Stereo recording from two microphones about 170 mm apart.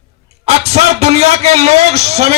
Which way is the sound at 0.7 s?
40° right (ahead or behind).